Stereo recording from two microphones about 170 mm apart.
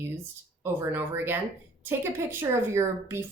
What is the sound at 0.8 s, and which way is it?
Speech, 15° right (ahead or behind).